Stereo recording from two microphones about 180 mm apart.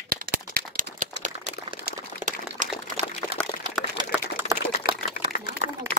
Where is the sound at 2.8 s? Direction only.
40° right (ahead or behind).